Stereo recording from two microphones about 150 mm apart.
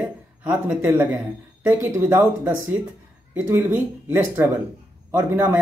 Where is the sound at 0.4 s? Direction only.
10° right (ahead or behind).